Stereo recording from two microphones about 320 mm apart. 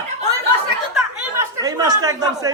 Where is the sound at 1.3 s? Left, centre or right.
Centre.